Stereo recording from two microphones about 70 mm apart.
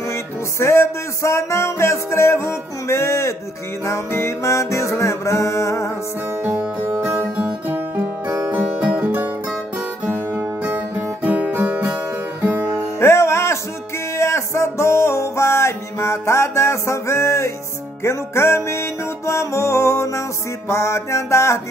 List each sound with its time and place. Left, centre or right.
0.1 s music: left
6.8 s music: right
10.6 s music: right
13.0 s music: left